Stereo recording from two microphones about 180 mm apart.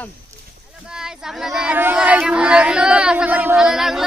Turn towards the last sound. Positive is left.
turn(degrees=0)  # may be behind; listen again after turning